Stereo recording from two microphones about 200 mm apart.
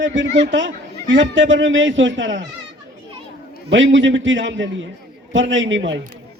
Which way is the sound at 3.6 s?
65° right (ahead or behind).